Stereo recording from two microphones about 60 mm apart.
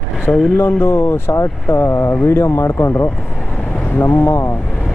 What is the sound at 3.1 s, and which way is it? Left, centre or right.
Speech, centre.